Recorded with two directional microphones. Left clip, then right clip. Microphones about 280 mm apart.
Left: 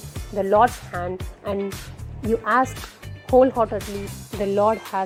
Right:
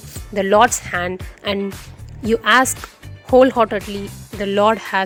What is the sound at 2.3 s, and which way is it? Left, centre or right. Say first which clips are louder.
Speech: right 6 dB; right.